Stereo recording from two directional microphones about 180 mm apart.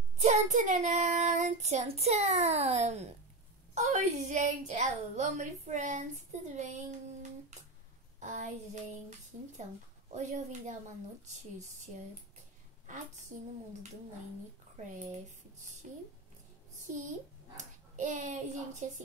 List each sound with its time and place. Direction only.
0.2 s child singing: 40° right (ahead or behind)
8.2 s a woman's voice: 40° right (ahead or behind)
10.1 s child singing: 40° right (ahead or behind)
12.8 s a woman's voice: 45° right (ahead or behind)
15.8 s child singing: 40° right (ahead or behind)
17.6 s a child's voice: 40° right (ahead or behind)